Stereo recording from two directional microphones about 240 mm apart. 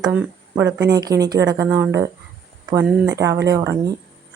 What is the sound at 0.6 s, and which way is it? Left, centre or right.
Speech, right.